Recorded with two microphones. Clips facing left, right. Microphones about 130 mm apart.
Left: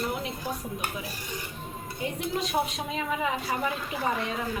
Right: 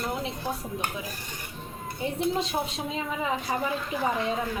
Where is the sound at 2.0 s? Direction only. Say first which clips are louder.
Right 3 dB; 30° right (ahead or behind).